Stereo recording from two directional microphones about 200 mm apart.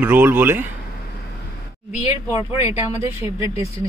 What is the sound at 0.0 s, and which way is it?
Speech, 10° right (ahead or behind).